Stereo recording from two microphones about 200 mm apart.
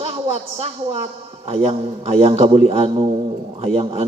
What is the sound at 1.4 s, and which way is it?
A man's voice, 30° right (ahead or behind).